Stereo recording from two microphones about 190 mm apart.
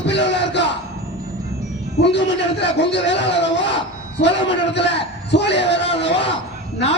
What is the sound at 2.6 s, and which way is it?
A man's voice, 65° left (ahead or behind).